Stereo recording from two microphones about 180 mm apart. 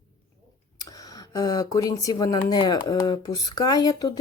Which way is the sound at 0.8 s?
20° left (ahead or behind).